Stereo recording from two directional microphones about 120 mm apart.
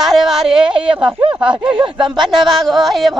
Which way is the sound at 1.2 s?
40° right (ahead or behind).